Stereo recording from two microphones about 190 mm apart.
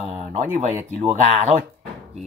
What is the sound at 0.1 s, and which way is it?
Speech, 35° right (ahead or behind).